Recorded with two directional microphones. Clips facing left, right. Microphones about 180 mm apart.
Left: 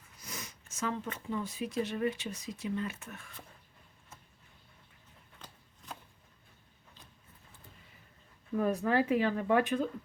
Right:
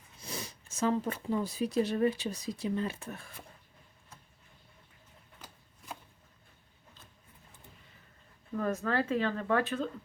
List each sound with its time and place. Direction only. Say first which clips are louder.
0.2 s speech: right 4 dB; 30° right (ahead or behind)
5.4 s chopping: even; 10° right (ahead or behind)
8.5 s speech: left 2 dB; 15° left (ahead or behind)